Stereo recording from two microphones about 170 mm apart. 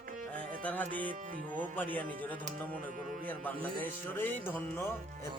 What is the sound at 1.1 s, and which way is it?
Speech, 50° right (ahead or behind).